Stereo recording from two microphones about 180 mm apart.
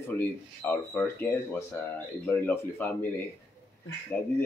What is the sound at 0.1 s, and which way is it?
Speech, 10° left (ahead or behind).